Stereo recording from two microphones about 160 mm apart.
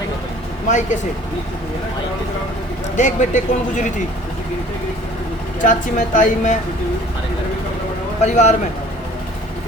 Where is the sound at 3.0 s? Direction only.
50° left (ahead or behind).